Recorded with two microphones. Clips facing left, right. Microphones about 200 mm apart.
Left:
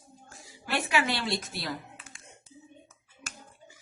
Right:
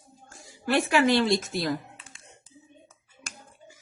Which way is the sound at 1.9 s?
30° right (ahead or behind).